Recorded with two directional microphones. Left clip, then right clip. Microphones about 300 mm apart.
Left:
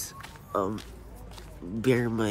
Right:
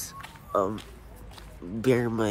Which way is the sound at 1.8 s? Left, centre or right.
Centre.